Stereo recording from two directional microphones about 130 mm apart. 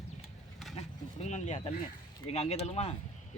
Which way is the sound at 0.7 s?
60° left (ahead or behind).